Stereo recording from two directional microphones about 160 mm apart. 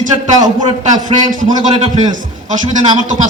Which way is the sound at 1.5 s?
30° right (ahead or behind).